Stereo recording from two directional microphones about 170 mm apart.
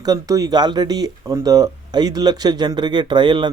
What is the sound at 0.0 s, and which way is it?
Speech, 20° right (ahead or behind).